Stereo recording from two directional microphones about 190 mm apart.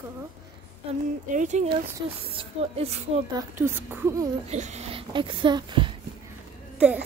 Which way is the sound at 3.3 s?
10° right (ahead or behind).